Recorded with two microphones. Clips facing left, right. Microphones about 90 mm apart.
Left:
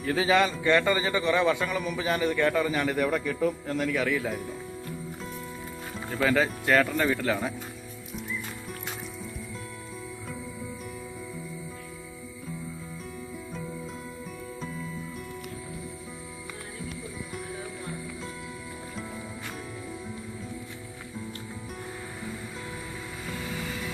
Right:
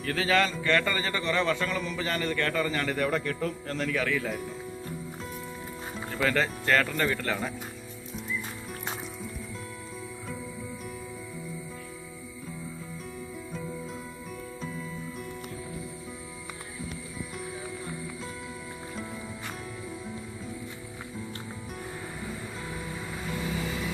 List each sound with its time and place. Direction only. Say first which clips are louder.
0.0 s a man's voice: left 2 dB; 15° left (ahead or behind)
6.2 s a man's voice: left 2 dB; 10° left (ahead or behind)